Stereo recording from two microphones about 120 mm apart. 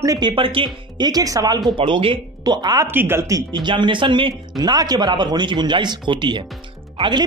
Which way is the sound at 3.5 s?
40° right (ahead or behind).